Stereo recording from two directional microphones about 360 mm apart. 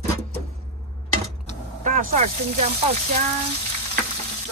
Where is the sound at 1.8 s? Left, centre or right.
Right.